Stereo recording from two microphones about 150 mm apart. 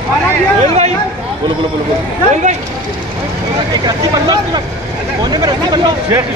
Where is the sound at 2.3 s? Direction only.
55° right (ahead or behind).